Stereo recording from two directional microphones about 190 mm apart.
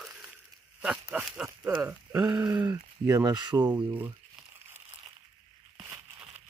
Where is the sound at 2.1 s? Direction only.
20° right (ahead or behind).